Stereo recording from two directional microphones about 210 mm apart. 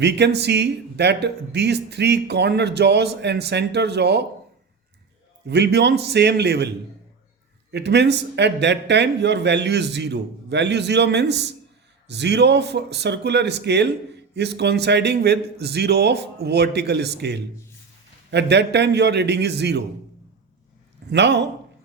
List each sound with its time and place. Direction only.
0.0 s speech: 55° right (ahead or behind)
5.5 s speech: 55° right (ahead or behind)
7.7 s speech: 55° right (ahead or behind)
21.1 s speech: 55° right (ahead or behind)